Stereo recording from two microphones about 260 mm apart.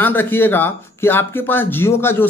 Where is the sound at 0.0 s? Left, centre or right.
Centre.